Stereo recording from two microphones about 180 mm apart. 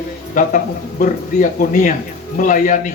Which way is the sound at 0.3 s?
45° left (ahead or behind).